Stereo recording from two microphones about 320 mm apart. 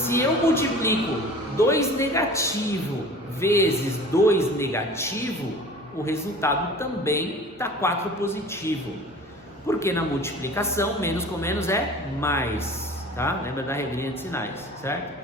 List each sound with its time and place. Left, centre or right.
0.0 s a man's voice: centre